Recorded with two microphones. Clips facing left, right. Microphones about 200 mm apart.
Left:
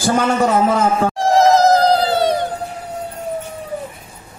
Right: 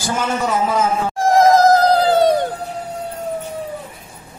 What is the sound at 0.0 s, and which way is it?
A man's voice, 55° left (ahead or behind).